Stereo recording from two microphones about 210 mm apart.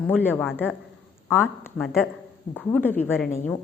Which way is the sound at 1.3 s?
10° left (ahead or behind).